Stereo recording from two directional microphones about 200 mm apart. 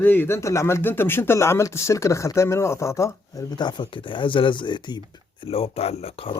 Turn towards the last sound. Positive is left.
turn(degrees=30)  # may be behind; listen again after turning